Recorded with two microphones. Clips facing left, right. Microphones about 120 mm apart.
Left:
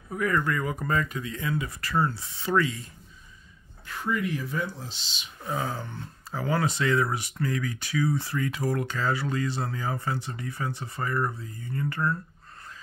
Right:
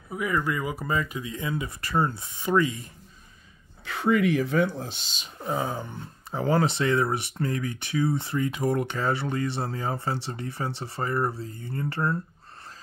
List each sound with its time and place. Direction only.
0.1 s speech: 10° right (ahead or behind)
3.8 s speech: 80° right; by 5.3 s 45° right (ahead or behind)
5.4 s speech: 20° right (ahead or behind)
6.4 s speech: 25° right (ahead or behind)